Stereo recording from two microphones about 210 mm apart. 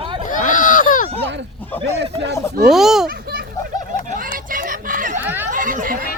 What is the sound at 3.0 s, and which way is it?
Children playing, 45° right (ahead or behind).